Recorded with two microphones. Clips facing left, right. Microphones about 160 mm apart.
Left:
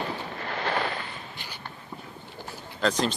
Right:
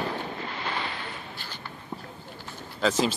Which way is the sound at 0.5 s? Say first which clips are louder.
Left 8 dB; 60° left (ahead or behind).